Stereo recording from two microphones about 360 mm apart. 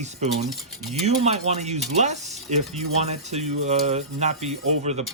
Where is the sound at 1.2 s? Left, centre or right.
Centre.